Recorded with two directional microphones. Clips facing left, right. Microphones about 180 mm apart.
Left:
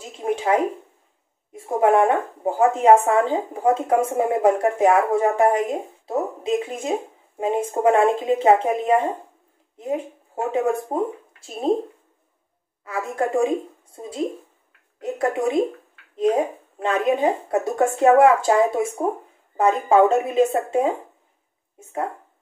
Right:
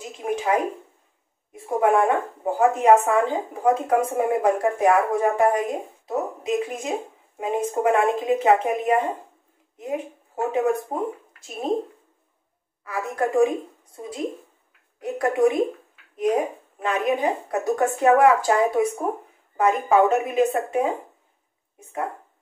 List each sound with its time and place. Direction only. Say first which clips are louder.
0.2 s speech: left 3 dB; 25° left (ahead or behind)
12.8 s speech: left 1 dB; 25° left (ahead or behind)
15.0 s speech: right 2 dB; 25° left (ahead or behind)